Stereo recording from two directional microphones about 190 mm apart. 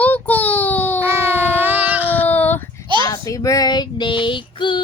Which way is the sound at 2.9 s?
25° right (ahead or behind).